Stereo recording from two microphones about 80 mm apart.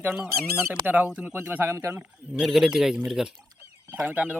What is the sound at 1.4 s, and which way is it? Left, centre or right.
Speech, right.